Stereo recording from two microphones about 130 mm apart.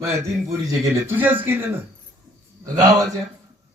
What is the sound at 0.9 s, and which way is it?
Speech, 15° right (ahead or behind).